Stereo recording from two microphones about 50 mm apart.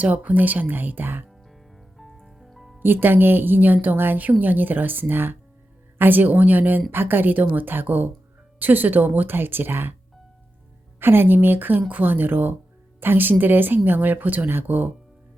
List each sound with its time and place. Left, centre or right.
0.0 s a woman's voice: right
1.5 s music: centre
2.8 s a woman's voice: right
11.0 s a woman's voice: right